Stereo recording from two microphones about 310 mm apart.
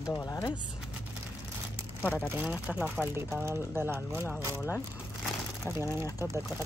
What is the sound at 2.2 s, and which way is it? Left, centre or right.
A woman's voice, centre.